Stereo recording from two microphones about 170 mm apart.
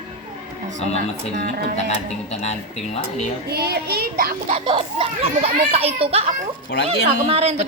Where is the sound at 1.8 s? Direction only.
40° left (ahead or behind).